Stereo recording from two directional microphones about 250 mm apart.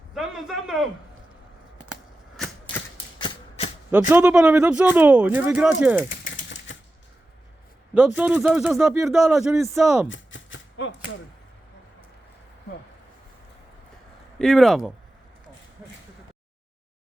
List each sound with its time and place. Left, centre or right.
0.1 s a sound: centre
2.7 s typewriter: centre
4.1 s speech: centre
7.9 s speech: centre
10.1 s chopping: left
14.3 s speech: centre